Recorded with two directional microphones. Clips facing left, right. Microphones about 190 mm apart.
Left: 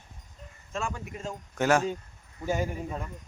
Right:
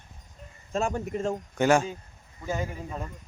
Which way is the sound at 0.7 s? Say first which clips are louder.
Right 7 dB; 40° right (ahead or behind).